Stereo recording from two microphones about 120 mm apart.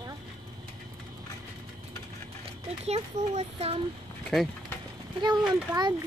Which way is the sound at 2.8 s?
60° right (ahead or behind).